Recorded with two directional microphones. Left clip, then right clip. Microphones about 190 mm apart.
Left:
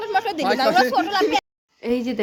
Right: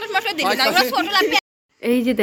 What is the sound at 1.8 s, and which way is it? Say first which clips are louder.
Speech: right 4 dB; 15° right (ahead or behind).